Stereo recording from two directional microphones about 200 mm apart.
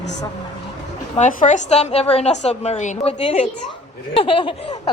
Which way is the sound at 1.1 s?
40° left (ahead or behind).